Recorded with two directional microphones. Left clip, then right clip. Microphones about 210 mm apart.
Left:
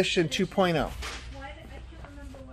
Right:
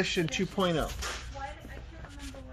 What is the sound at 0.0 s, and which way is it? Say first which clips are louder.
Speech: left 4 dB; 30° left (ahead or behind).